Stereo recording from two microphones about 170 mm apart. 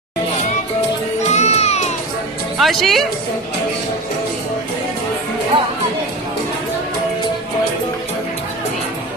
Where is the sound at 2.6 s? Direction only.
Centre (ahead or behind).